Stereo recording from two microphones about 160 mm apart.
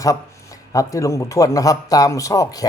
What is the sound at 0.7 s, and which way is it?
A man's voice, 20° left (ahead or behind).